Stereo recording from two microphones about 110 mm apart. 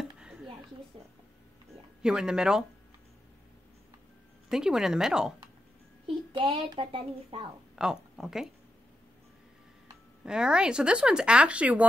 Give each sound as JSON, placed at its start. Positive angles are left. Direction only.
{"t": 0.0, "sound": "a sound", "side_deg": -5}
{"t": 0.9, "sound": "speech", "side_deg": -55}
{"t": 2.0, "sound": "speech", "side_deg": -5}
{"t": 4.5, "sound": "speech", "side_deg": -5}
{"t": 6.3, "sound": "a child's voice", "side_deg": -55}
{"t": 7.7, "sound": "speech", "side_deg": -5}
{"t": 10.2, "sound": "speech", "side_deg": -5}